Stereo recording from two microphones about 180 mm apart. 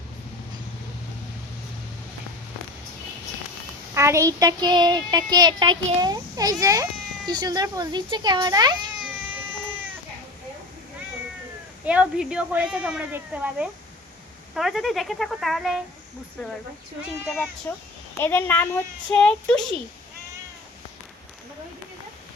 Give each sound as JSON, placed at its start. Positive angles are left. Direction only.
{"t": 3.9, "sound": "a child's voice", "side_deg": -15}
{"t": 11.9, "sound": "a woman's voice", "side_deg": -5}
{"t": 17.2, "sound": "speech", "side_deg": 0}
{"t": 18.2, "sound": "a woman's voice", "side_deg": 10}